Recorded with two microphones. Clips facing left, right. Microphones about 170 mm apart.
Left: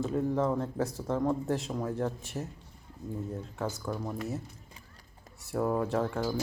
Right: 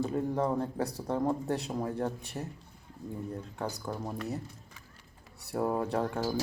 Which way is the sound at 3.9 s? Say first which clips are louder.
Left 2 dB; 15° right (ahead or behind).